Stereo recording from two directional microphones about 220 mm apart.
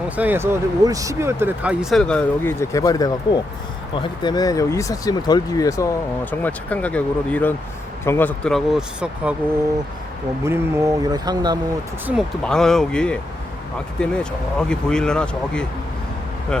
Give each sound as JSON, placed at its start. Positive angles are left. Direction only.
{"t": 0.2, "sound": "speech", "side_deg": -10}
{"t": 10.4, "sound": "speech", "side_deg": -10}
{"t": 12.0, "sound": "speech", "side_deg": 0}